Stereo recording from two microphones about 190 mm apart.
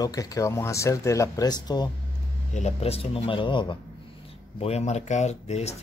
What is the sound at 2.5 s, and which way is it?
Speech, 35° left (ahead or behind).